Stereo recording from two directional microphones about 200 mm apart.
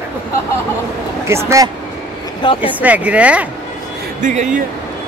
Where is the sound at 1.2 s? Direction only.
15° right (ahead or behind).